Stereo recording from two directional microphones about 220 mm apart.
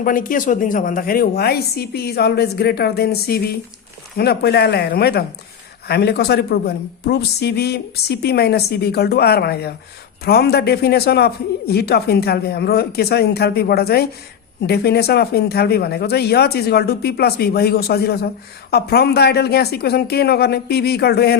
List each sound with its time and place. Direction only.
0.0 s a woman's voice: 40° left (ahead or behind)